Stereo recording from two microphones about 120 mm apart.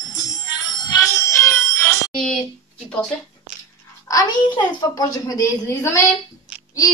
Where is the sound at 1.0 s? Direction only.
25° left (ahead or behind).